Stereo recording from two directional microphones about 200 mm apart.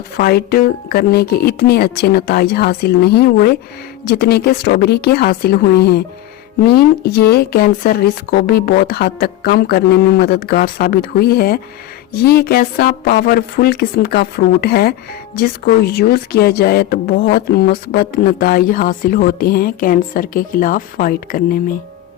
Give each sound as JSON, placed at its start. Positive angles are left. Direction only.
{"t": 0.2, "sound": "speech", "side_deg": 50}